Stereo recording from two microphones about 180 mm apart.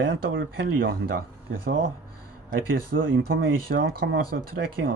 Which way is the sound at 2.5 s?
55° right (ahead or behind).